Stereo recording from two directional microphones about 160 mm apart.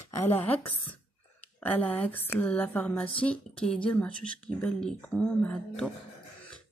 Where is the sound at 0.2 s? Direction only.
15° left (ahead or behind).